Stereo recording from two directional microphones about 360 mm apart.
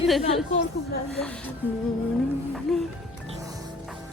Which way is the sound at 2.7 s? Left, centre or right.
Centre.